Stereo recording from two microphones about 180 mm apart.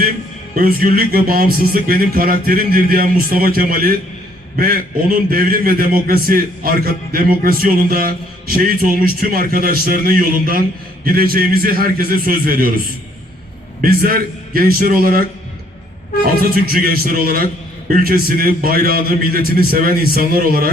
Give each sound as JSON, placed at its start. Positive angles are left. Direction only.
{"t": 0.5, "sound": "a man's voice", "side_deg": -55}
{"t": 13.8, "sound": "a man's voice", "side_deg": -55}
{"t": 16.2, "sound": "a man's voice", "side_deg": -55}